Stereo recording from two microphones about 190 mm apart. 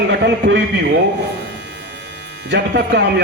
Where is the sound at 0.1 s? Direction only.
65° right (ahead or behind).